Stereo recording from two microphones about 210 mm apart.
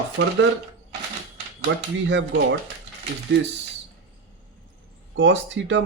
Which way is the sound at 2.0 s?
60° right (ahead or behind).